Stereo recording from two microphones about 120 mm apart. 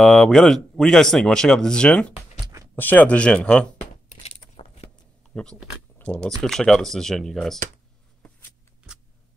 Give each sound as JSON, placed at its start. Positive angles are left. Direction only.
{"t": 0.0, "sound": "speech", "side_deg": 5}
{"t": 4.6, "sound": "mechanisms", "side_deg": 55}
{"t": 5.3, "sound": "speech", "side_deg": 5}